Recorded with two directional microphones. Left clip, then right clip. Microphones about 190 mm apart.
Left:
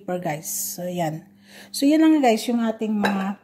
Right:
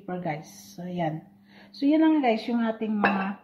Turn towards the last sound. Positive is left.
turn(degrees=55)  # may be behind; listen again after turning